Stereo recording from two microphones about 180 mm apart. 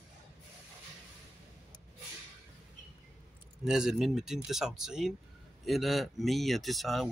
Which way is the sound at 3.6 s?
5° right (ahead or behind).